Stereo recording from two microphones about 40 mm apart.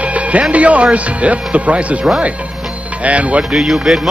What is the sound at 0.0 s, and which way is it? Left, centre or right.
Speech, right.